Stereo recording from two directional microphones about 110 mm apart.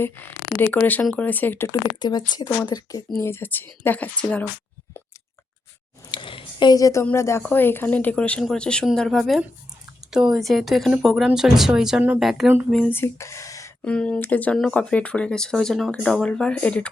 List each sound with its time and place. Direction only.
0.6 s speech: 15° left (ahead or behind)
1.6 s speech: 35° left (ahead or behind)
3.2 s speech: 20° left (ahead or behind)
6.1 s a sound: 50° left (ahead or behind); by 7.0 s 30° left (ahead or behind)
7.0 s speech: 20° left (ahead or behind); by 12.5 s centre (ahead or behind)
12.9 s speech: 25° left (ahead or behind)
13.8 s speech: 10° left (ahead or behind)